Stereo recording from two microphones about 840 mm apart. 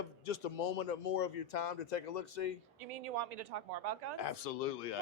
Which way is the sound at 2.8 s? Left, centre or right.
Right.